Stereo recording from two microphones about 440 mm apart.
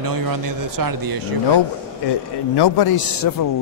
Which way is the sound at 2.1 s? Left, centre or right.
Left.